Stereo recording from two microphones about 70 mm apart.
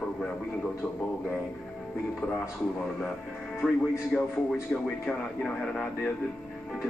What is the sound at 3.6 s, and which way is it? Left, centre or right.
Speech, centre.